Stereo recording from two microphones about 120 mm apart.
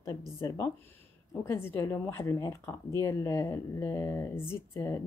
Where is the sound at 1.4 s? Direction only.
20° left (ahead or behind).